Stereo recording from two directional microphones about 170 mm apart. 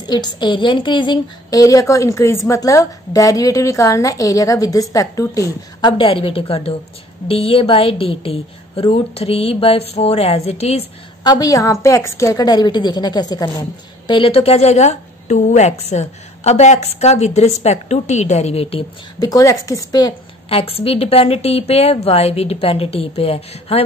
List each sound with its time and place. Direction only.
0.0 s a woman's voice: 25° left (ahead or behind)
11.2 s a woman's voice: 25° left (ahead or behind)
19.1 s a woman's voice: 20° left (ahead or behind)
20.4 s a woman's voice: 35° left (ahead or behind)